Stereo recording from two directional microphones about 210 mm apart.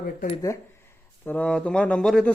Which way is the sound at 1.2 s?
5° left (ahead or behind).